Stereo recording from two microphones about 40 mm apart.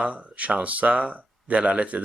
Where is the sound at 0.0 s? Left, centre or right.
Right.